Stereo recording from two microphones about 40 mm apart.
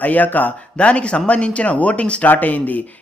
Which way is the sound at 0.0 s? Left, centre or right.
Left.